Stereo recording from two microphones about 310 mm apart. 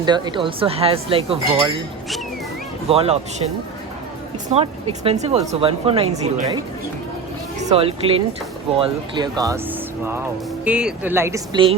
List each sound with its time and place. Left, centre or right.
0.0 s speech: centre
2.9 s speech: centre
4.5 s speech: centre
7.7 s speech: centre